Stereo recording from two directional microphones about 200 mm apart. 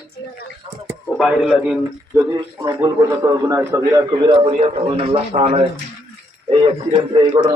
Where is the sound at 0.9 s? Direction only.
Centre (ahead or behind).